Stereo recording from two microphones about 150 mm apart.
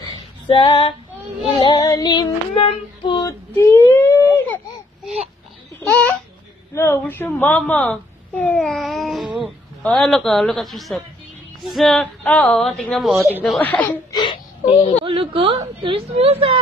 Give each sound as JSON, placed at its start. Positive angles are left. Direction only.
{"t": 0.5, "sound": "female singing", "side_deg": 30}
{"t": 1.6, "sound": "child singing", "side_deg": 25}
{"t": 5.8, "sound": "babbling", "side_deg": 10}
{"t": 6.7, "sound": "a woman's voice", "side_deg": 15}
{"t": 14.1, "sound": "whimper", "side_deg": 30}
{"t": 15.0, "sound": "a woman's voice", "side_deg": -35}